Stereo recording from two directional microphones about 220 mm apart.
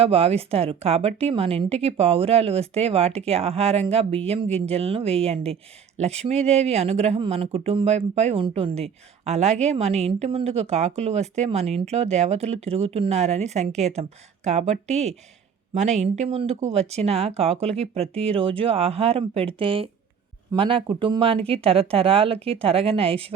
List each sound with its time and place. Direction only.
0.0 s speech: 25° right (ahead or behind)